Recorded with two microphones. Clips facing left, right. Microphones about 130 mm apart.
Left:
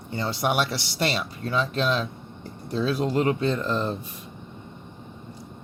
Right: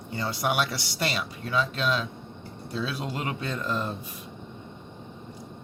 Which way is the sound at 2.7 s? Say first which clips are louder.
Left 8 dB; 45° left (ahead or behind).